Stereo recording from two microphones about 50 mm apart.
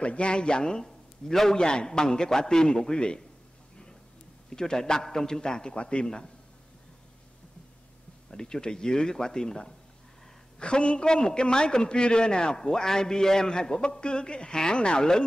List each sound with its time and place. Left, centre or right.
0.0 s a man's voice: left
4.5 s a man's voice: centre
8.3 s a man's voice: centre